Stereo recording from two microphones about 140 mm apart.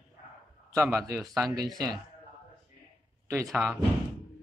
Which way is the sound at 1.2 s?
Centre (ahead or behind).